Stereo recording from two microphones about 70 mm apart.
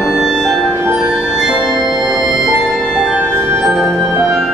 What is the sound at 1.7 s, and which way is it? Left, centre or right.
Music, right.